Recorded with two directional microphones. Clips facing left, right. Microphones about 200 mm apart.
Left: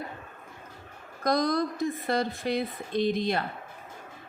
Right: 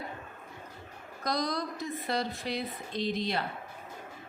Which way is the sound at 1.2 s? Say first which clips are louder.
Left 7 dB; 50° left (ahead or behind).